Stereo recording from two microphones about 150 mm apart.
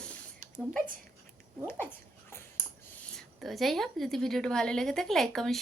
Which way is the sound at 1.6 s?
15° left (ahead or behind).